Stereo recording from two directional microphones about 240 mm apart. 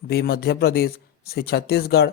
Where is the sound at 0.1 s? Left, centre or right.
Left.